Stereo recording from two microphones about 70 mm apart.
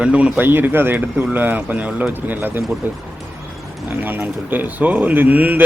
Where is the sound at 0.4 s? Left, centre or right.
Right.